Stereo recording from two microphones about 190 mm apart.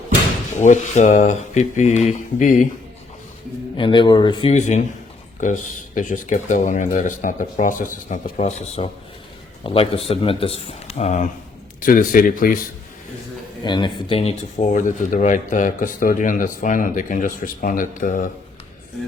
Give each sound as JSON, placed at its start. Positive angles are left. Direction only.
{"t": 0.6, "sound": "speech", "side_deg": 40}
{"t": 3.8, "sound": "speech", "side_deg": 25}
{"t": 13.7, "sound": "speech", "side_deg": 25}
{"t": 14.6, "sound": "speech", "side_deg": 40}